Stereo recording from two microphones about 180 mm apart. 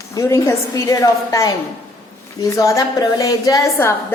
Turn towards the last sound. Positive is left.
turn(degrees=15)  # may be behind; listen again after turning